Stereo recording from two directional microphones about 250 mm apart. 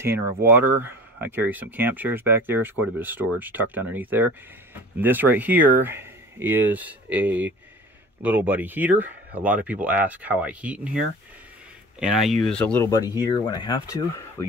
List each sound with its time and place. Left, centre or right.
0.0 s speech: centre